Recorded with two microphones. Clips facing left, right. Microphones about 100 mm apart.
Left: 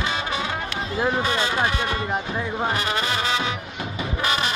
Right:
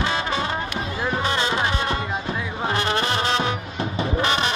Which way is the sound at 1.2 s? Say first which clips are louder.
Even; 25° right (ahead or behind).